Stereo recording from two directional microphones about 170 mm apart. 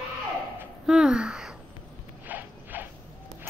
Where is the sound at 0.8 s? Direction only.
5° right (ahead or behind).